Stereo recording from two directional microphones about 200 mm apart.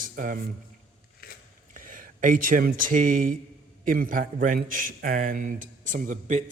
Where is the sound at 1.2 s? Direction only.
50° left (ahead or behind).